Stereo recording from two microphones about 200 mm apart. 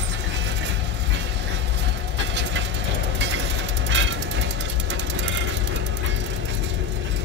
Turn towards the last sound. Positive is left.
turn(degrees=-65)  # may be behind; listen again after turning